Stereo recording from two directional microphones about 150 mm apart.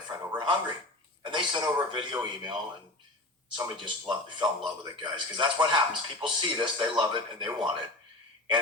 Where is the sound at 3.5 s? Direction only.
30° right (ahead or behind).